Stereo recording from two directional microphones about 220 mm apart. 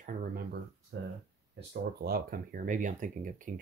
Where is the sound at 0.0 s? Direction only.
40° right (ahead or behind).